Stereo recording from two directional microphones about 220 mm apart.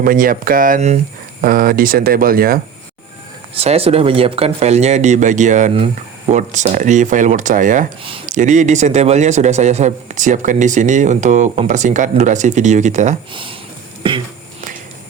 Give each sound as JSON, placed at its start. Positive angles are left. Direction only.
{"t": 0.0, "sound": "a man's voice", "side_deg": -40}
{"t": 3.5, "sound": "a man's voice", "side_deg": -25}
{"t": 13.3, "sound": "speech", "side_deg": -25}